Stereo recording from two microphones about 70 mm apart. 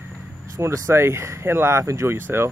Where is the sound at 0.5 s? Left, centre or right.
Right.